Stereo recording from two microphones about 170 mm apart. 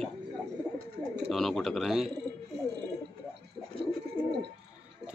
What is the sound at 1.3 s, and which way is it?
Speech, centre (ahead or behind).